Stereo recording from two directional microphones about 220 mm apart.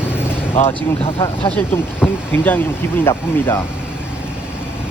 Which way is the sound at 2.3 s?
10° left (ahead or behind).